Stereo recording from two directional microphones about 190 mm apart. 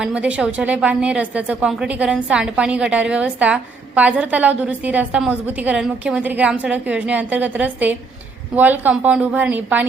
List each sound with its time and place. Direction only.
0.0 s a woman's voice: 5° right (ahead or behind)